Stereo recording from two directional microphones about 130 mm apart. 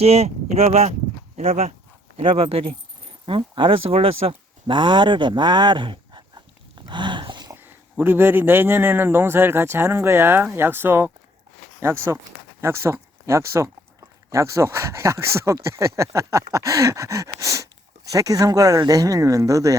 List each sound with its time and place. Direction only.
0.0 s speech: 55° right (ahead or behind); by 6.4 s 35° right (ahead or behind)
6.8 s a sound: 35° right (ahead or behind)
7.5 s a man's voice: 15° right (ahead or behind)